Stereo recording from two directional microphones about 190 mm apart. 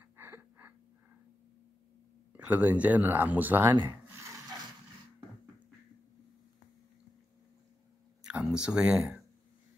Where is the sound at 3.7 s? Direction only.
25° right (ahead or behind).